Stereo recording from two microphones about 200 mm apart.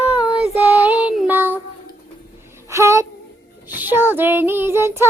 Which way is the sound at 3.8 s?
10° right (ahead or behind).